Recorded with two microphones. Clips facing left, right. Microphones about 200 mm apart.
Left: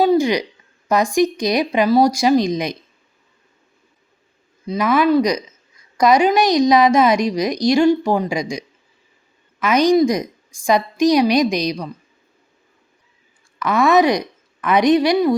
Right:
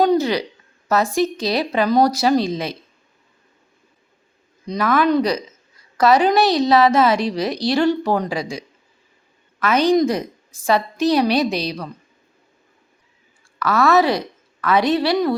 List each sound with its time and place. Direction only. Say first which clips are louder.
0.0 s a sound: left 2 dB; 10° left (ahead or behind)
0.9 s a woman's voice: left 2 dB; 15° left (ahead or behind)
4.6 s a woman's voice: left 2 dB; 5° left (ahead or behind)
9.6 s a woman's voice: left 2 dB; 15° left (ahead or behind)
13.6 s a woman's voice: left 2 dB; 15° left (ahead or behind)